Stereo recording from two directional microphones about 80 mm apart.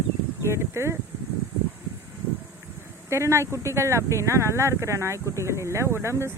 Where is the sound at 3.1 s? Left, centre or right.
Right.